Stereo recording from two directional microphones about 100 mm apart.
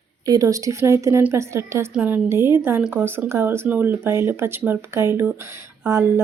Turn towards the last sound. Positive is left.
turn(degrees=-25)  # may be behind; listen again after turning